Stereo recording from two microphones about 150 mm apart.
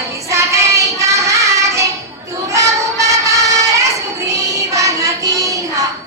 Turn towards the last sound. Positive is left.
turn(degrees=-25)  # may be behind; listen again after turning